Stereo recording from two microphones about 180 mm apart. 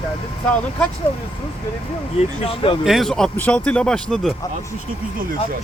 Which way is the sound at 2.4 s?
30° left (ahead or behind).